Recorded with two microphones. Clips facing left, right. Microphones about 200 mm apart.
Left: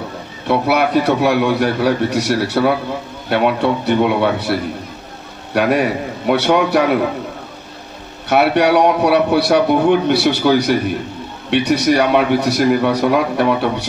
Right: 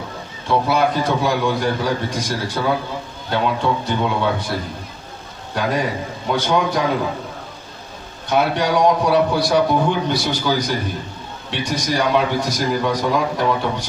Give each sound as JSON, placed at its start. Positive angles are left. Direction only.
{"t": 0.5, "sound": "a man's voice", "side_deg": 70}
{"t": 8.3, "sound": "a man's voice", "side_deg": 70}